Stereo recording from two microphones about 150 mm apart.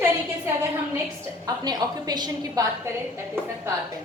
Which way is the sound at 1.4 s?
25° right (ahead or behind).